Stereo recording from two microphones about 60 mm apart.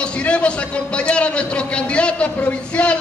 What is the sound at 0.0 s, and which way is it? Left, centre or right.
A man's voice, centre.